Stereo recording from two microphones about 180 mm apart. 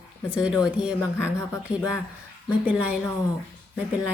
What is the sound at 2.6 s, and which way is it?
Speech, 10° right (ahead or behind).